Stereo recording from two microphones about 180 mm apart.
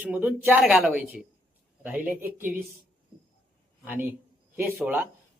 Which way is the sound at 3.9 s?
10° right (ahead or behind).